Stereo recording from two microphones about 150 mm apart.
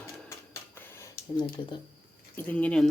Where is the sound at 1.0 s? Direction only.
30° left (ahead or behind).